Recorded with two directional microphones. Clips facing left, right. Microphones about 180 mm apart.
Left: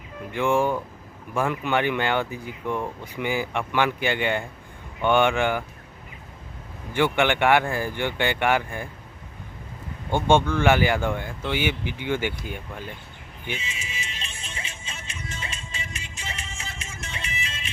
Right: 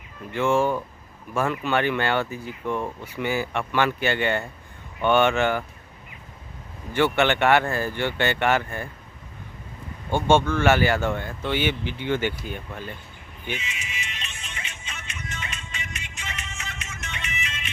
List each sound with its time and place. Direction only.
0.3 s speech: 15° left (ahead or behind)
6.9 s speech: 15° left (ahead or behind)
10.1 s speech: 15° left (ahead or behind)
13.6 s music: 30° left (ahead or behind)